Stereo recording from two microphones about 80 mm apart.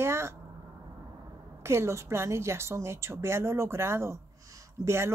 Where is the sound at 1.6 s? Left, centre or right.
Right.